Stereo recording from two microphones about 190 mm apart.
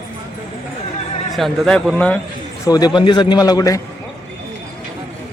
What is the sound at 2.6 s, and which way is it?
A man's voice, 20° left (ahead or behind).